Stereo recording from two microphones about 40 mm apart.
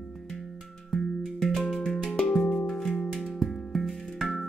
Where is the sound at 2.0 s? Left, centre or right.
Centre.